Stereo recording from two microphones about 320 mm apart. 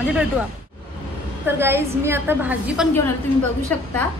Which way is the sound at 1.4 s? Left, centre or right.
Centre.